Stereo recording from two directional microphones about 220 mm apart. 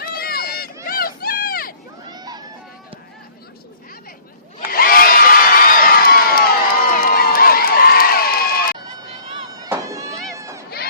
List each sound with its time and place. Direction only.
0.0 s run: 45° left (ahead or behind)
0.9 s a sound: 40° left (ahead or behind)
2.0 s a sound: 15° right (ahead or behind)
4.7 s crowd: 40° left (ahead or behind)
9.5 s fireworks: 15° right (ahead or behind)
10.3 s run: 15° right (ahead or behind)